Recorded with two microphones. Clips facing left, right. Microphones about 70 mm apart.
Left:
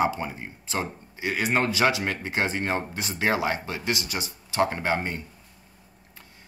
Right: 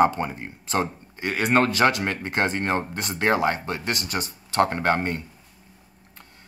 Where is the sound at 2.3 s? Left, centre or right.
Right.